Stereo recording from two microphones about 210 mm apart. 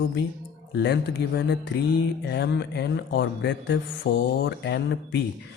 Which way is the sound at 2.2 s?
55° left (ahead or behind).